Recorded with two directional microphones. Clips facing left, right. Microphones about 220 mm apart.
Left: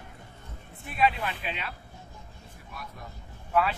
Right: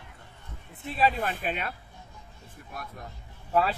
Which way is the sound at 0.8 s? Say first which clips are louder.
Right 1 dB; 35° right (ahead or behind).